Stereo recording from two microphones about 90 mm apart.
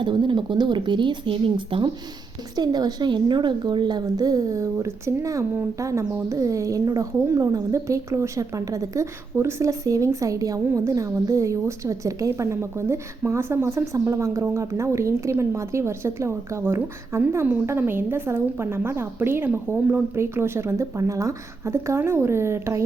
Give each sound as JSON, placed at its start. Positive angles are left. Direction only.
{"t": 0.0, "sound": "speech", "side_deg": -65}
{"t": 2.6, "sound": "a woman's voice", "side_deg": -50}